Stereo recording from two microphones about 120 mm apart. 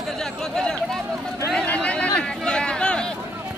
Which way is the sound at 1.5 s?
5° left (ahead or behind).